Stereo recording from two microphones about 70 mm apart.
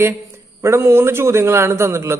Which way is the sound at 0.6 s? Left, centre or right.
Right.